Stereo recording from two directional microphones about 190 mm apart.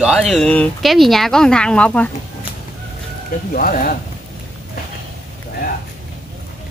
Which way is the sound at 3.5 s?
45° left (ahead or behind).